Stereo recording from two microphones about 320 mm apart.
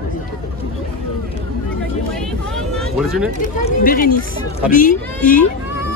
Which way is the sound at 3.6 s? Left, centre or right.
Left.